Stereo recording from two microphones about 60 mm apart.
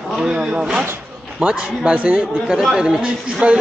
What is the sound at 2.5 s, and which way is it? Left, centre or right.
Speech, centre.